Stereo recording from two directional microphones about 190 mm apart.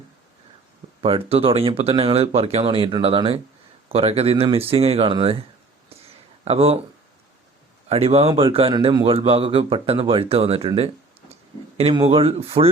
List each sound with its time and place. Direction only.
1.0 s speech: 30° right (ahead or behind)
7.9 s speech: 30° right (ahead or behind)